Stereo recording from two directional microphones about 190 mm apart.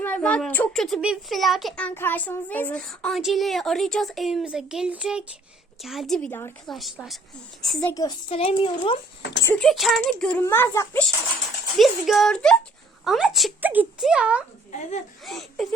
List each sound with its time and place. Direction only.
0.0 s a child's voice: 5° left (ahead or behind)
7.9 s speech: 20° left (ahead or behind)
9.4 s speech: 5° left (ahead or behind)
11.8 s a child's voice: centre (ahead or behind)
14.7 s speech: 35° left (ahead or behind)
15.2 s a child's voice: centre (ahead or behind)